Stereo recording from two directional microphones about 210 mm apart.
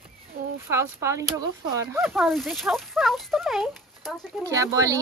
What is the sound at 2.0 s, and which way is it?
Speech, centre (ahead or behind).